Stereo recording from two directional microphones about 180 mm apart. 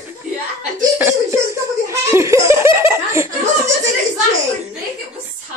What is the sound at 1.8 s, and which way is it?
Laughter, 15° right (ahead or behind).